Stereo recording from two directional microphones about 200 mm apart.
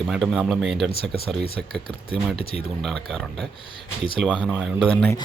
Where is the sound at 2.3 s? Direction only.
30° left (ahead or behind).